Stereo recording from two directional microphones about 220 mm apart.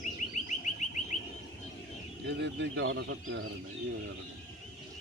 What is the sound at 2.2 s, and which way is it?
Speech, 55° right (ahead or behind).